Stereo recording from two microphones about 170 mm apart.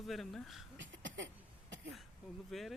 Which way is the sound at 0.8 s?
90° right.